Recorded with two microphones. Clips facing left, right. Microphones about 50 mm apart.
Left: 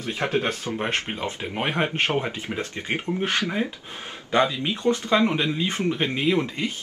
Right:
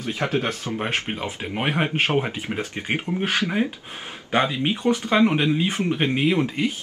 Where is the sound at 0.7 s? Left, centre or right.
Centre.